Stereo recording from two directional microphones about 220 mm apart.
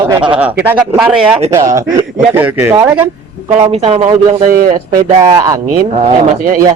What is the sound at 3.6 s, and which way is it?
Speech, 30° right (ahead or behind).